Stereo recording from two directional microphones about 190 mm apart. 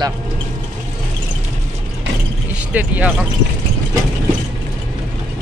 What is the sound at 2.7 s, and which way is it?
Speech, 5° right (ahead or behind).